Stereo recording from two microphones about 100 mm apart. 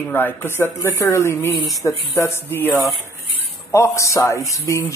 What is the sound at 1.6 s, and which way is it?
Speech, centre (ahead or behind).